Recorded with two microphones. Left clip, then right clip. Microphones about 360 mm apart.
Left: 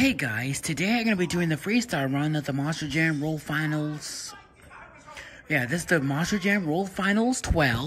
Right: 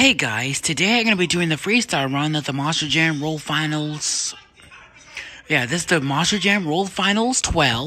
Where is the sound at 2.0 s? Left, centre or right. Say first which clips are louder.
Right 6 dB; centre.